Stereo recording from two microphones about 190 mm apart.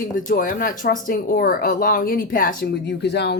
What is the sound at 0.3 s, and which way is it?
Speech, 45° left (ahead or behind).